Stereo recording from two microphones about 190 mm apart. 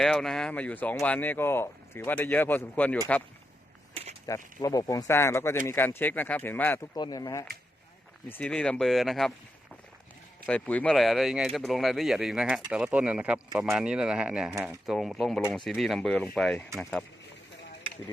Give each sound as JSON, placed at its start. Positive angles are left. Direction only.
{"t": 0.0, "sound": "speech", "side_deg": 0}
{"t": 4.3, "sound": "speech", "side_deg": 20}
{"t": 6.9, "sound": "speech", "side_deg": 20}
{"t": 8.3, "sound": "speech", "side_deg": 5}
{"t": 10.4, "sound": "speech", "side_deg": 5}